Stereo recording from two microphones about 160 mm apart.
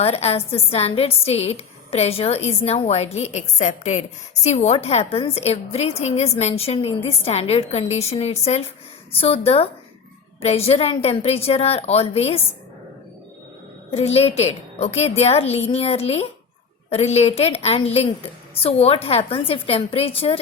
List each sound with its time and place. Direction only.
0.0 s a woman's voice: 40° left (ahead or behind)
13.9 s a woman's voice: 40° left (ahead or behind)